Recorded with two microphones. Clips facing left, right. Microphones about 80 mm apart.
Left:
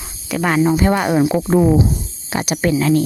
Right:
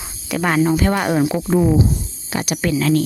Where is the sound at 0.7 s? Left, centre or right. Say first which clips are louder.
Left 2 dB; centre.